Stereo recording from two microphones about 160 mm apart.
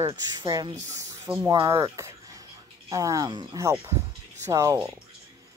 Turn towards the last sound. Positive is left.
turn(degrees=-20)  # may be behind; listen again after turning